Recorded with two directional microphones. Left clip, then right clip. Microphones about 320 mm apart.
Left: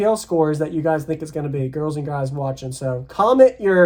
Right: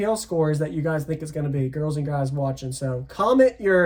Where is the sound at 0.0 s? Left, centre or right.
Centre.